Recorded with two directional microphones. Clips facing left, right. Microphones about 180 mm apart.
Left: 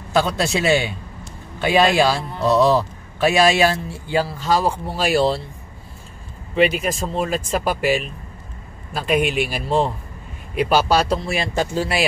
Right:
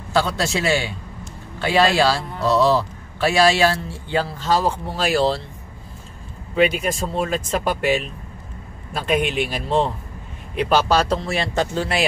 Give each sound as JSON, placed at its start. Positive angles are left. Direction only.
{"t": 0.1, "sound": "a man's voice", "side_deg": 20}
{"t": 6.5, "sound": "a man's voice", "side_deg": 0}